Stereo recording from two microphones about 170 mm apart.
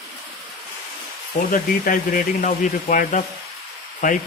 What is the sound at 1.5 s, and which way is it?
Speech, 55° left (ahead or behind).